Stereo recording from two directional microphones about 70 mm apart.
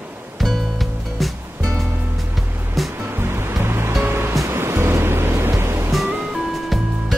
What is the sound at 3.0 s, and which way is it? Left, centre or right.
Waves, right.